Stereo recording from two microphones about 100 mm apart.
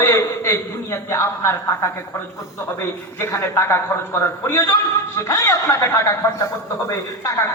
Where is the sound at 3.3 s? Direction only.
25° left (ahead or behind).